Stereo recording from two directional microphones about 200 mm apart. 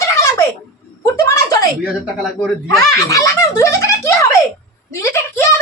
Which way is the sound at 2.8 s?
15° left (ahead or behind).